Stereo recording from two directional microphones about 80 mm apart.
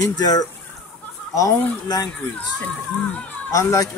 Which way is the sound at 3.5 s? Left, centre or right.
Left.